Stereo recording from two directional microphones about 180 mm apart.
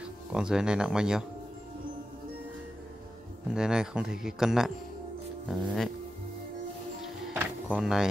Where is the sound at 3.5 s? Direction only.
5° right (ahead or behind).